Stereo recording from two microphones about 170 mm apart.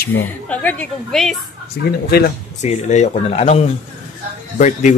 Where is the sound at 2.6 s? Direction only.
45° left (ahead or behind).